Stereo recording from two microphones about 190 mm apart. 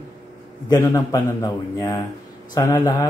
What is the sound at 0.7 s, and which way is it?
A man's voice, 20° left (ahead or behind).